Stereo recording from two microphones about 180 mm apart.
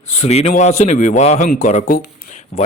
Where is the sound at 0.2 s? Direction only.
35° left (ahead or behind).